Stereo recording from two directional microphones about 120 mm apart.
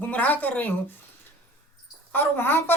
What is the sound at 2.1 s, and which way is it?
Speech, 15° left (ahead or behind).